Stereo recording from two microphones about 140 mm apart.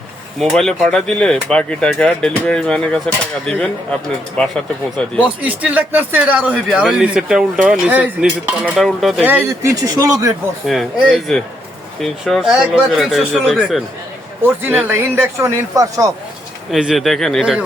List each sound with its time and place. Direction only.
0.4 s speech: 5° left (ahead or behind)
5.4 s speech: 10° right (ahead or behind)
9.2 s speech: 15° right (ahead or behind)
10.7 s speech: centre (ahead or behind)
14.8 s speech: 15° right (ahead or behind)
16.7 s speech: centre (ahead or behind)